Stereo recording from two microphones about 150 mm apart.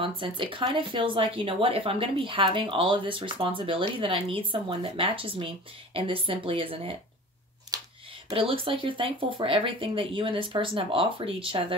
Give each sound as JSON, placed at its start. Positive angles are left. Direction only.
{"t": 0.0, "sound": "speech", "side_deg": -35}
{"t": 7.7, "sound": "a sound", "side_deg": -25}
{"t": 8.3, "sound": "speech", "side_deg": -35}